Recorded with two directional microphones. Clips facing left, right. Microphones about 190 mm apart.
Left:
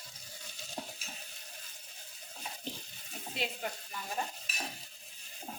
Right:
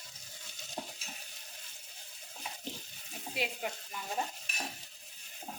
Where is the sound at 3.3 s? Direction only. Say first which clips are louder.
Right 1 dB; 10° right (ahead or behind).